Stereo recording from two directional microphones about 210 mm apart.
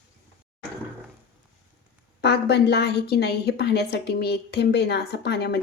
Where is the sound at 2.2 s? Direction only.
55° left (ahead or behind).